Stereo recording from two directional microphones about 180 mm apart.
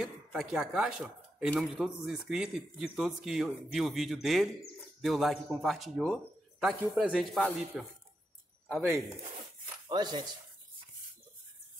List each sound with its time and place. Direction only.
0.0 s speech: centre (ahead or behind)
9.8 s speech: 25° right (ahead or behind)